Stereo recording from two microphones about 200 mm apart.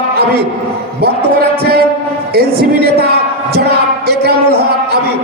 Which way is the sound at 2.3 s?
50° right (ahead or behind).